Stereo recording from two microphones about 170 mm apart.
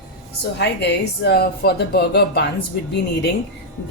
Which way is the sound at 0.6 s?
85° left.